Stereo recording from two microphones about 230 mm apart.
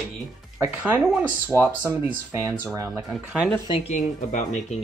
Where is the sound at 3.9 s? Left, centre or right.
Left.